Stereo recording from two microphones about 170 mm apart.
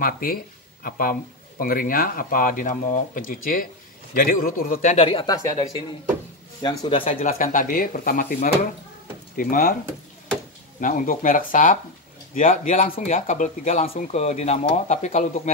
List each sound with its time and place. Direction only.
0.0 s speech: 60° left (ahead or behind)
4.9 s speech: 30° left (ahead or behind)
6.6 s speech: 25° left (ahead or behind)
7.2 s speech: 55° left (ahead or behind)
10.8 s speech: 50° left (ahead or behind)